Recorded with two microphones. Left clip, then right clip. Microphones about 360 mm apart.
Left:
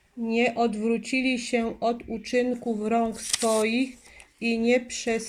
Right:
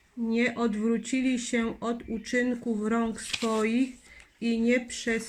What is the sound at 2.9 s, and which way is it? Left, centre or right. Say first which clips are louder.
Speech: left 5 dB; left.